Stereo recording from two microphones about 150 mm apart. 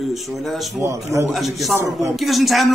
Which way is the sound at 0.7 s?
15° right (ahead or behind).